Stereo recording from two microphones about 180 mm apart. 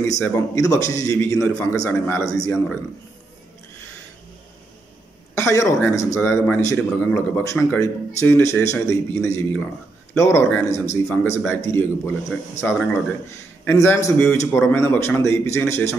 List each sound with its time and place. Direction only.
0.2 s a man's voice: 15° left (ahead or behind)
5.3 s a man's voice: 15° left (ahead or behind)
13.7 s a man's voice: 15° left (ahead or behind)